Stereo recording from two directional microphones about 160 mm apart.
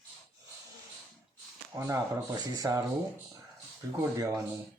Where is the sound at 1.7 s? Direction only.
20° right (ahead or behind).